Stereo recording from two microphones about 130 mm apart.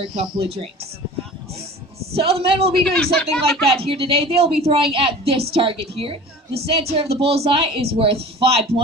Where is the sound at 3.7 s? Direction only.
45° right (ahead or behind).